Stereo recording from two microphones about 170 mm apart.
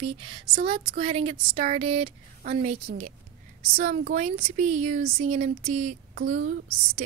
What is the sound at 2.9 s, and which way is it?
Speech, 45° right (ahead or behind).